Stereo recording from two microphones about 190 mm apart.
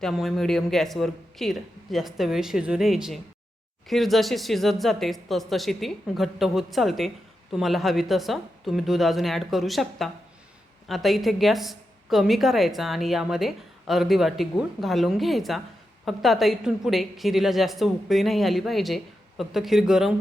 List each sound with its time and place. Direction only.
0.0 s a woman's voice: centre (ahead or behind)